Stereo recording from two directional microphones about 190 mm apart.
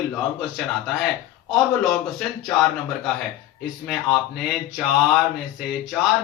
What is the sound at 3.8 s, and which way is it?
A man's voice, centre (ahead or behind).